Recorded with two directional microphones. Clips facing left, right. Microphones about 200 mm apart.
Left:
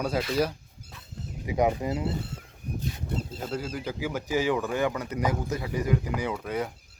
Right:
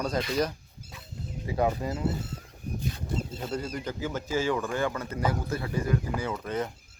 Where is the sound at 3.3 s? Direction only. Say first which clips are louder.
Even; 5° left (ahead or behind).